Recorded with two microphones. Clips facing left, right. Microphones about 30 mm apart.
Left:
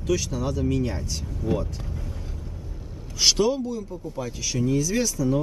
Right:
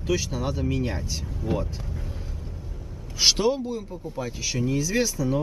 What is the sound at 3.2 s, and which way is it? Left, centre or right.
Speech, centre.